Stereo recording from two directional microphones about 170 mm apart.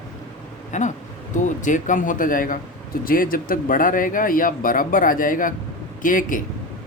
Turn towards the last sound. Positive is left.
turn(degrees=50)  # may be behind; listen again after turning